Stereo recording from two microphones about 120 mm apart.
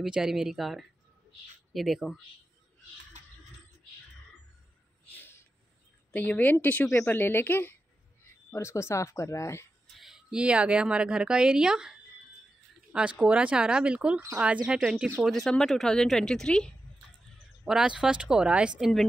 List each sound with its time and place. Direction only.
0.0 s speech: 5° right (ahead or behind)
5.1 s a sound: 15° left (ahead or behind)
6.1 s a woman's voice: 15° left (ahead or behind)
9.9 s a woman's voice: 5° right (ahead or behind)
17.6 s speech: 5° right (ahead or behind)